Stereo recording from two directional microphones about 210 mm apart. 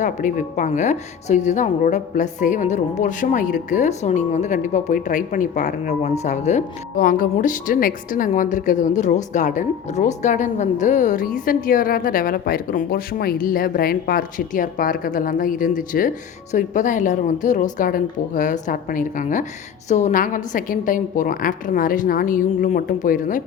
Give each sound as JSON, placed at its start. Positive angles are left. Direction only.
{"t": 0.0, "sound": "speech", "side_deg": 35}